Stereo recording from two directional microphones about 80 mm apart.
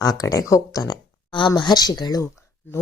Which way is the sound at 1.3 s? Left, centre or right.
Left.